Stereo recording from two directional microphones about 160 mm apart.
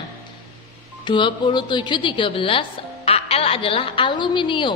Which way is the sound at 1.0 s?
30° left (ahead or behind).